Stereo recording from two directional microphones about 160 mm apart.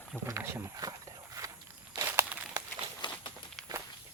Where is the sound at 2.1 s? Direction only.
10° right (ahead or behind).